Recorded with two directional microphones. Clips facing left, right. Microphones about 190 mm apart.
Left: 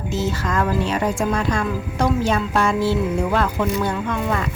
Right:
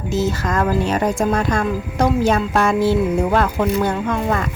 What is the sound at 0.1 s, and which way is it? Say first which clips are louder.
Speech: right 3 dB; 40° right (ahead or behind).